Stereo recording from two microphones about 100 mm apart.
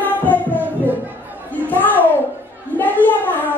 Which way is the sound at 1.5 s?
15° left (ahead or behind).